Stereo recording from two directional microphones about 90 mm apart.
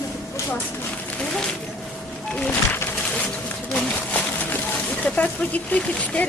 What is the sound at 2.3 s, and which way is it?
Speech, 15° left (ahead or behind).